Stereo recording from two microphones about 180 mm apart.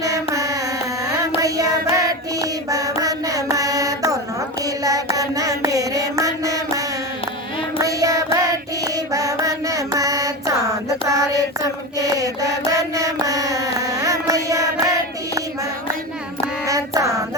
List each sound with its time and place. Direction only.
0.0 s carnatic music: 20° right (ahead or behind)
1.4 s music: 20° right (ahead or behind)
4.6 s mantra: 20° right (ahead or behind)
7.8 s child singing: 20° right (ahead or behind)
9.1 s a sound: 20° right (ahead or behind)
11.9 s mantra: 20° right (ahead or behind)
16.6 s child singing: 20° right (ahead or behind)